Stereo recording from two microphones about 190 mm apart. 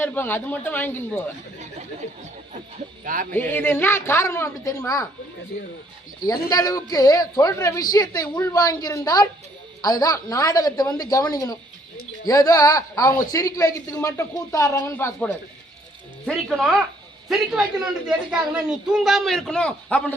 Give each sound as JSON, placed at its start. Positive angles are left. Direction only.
{"t": 0.0, "sound": "a man's voice", "side_deg": 10}
{"t": 3.0, "sound": "speech", "side_deg": -45}
{"t": 3.3, "sound": "a man's voice", "side_deg": 10}
{"t": 5.5, "sound": "speech", "side_deg": 60}
{"t": 6.5, "sound": "a woman's voice", "side_deg": 20}
{"t": 16.2, "sound": "a man's voice", "side_deg": 0}